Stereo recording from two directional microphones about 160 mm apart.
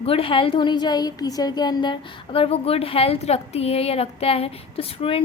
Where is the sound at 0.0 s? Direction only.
35° left (ahead or behind).